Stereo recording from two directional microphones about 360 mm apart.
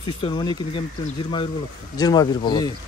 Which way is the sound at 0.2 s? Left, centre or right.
Centre.